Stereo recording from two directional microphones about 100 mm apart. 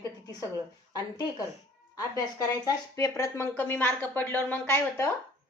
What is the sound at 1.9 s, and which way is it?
A woman's voice, 35° left (ahead or behind).